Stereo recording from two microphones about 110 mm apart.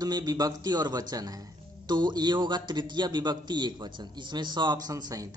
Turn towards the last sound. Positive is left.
turn(degrees=-35)  # may be behind; listen again after turning